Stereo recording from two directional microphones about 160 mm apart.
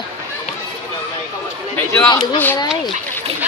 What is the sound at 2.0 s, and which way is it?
Speech, 35° left (ahead or behind).